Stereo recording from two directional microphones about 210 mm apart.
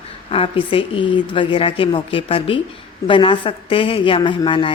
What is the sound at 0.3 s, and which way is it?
A woman's voice, 25° left (ahead or behind).